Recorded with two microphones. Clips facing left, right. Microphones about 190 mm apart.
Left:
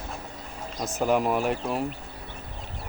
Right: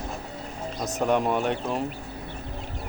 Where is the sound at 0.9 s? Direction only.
5° left (ahead or behind).